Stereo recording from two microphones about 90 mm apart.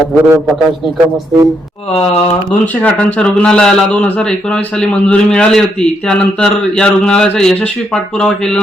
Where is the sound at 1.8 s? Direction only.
90° left.